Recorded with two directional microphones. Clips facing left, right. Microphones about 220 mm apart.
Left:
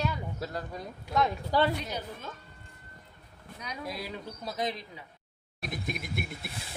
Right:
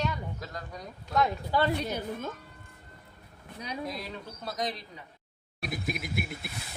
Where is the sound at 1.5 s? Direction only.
40° left (ahead or behind).